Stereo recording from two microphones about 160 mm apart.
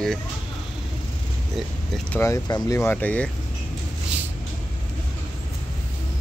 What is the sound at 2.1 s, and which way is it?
Speech, 15° left (ahead or behind).